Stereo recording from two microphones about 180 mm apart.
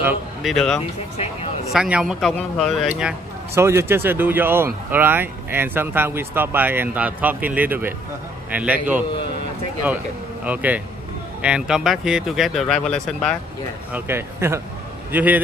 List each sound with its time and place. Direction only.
0.4 s speech: centre (ahead or behind)
1.1 s speech: 35° left (ahead or behind)
1.7 s speech: 5° right (ahead or behind)
3.5 s speech: 15° right (ahead or behind)
10.4 s speech: 10° right (ahead or behind)
13.9 s speech: 15° right (ahead or behind)